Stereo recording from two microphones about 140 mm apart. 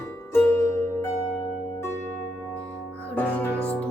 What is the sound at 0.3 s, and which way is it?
Music, 15° left (ahead or behind).